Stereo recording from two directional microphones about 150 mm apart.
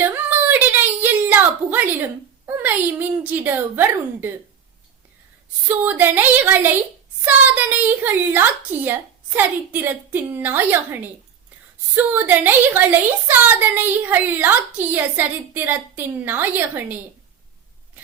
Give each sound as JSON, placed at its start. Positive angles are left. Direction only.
{"t": 0.0, "sound": "a sound", "side_deg": -15}
{"t": 2.5, "sound": "a woman's voice", "side_deg": -15}
{"t": 5.6, "sound": "a woman's voice", "side_deg": -10}